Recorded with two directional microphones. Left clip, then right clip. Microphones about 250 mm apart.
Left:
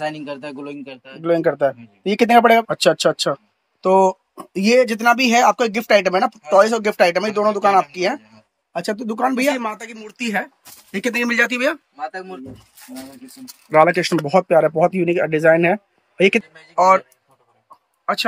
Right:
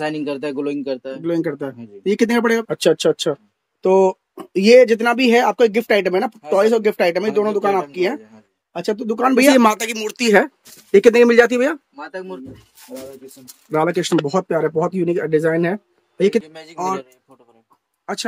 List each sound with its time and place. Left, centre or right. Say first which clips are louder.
0.0 s speech: right 3 dB; centre; by 1.2 s right
1.3 s speech: left 7 dB; centre
2.7 s speech: even; centre
9.3 s speech: right 8 dB; centre
13.7 s speech: left 4 dB; centre